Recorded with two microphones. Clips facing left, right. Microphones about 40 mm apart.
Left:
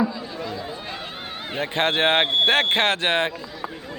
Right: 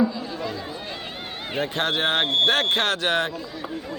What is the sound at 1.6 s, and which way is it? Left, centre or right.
Speech, left.